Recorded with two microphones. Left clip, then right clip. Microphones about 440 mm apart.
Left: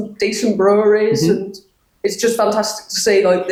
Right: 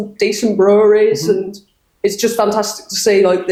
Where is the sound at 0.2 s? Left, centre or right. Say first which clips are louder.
Right 2 dB; right.